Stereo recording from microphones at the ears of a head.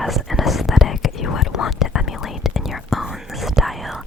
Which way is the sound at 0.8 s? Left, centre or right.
Left.